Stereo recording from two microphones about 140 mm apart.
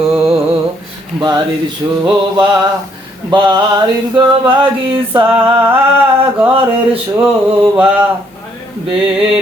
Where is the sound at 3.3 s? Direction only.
30° right (ahead or behind).